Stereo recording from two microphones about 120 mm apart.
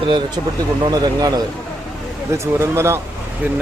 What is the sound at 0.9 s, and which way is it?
Speech, 35° right (ahead or behind).